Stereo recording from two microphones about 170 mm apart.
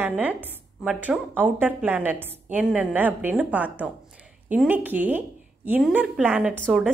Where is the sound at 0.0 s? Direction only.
10° right (ahead or behind).